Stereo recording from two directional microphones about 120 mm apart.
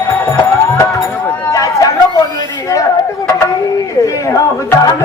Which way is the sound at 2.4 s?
30° left (ahead or behind).